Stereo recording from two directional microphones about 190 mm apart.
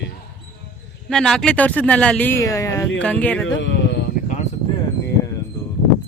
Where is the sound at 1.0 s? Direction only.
Centre (ahead or behind).